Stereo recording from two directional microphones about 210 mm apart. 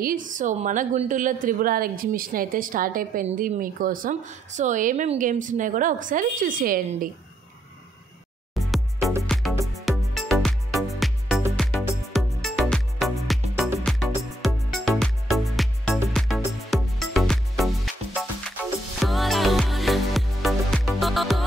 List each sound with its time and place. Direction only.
0.0 s a woman's voice: 40° right (ahead or behind)
8.5 s music: centre (ahead or behind)